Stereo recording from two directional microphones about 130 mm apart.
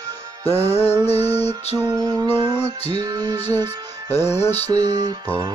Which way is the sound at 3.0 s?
30° right (ahead or behind).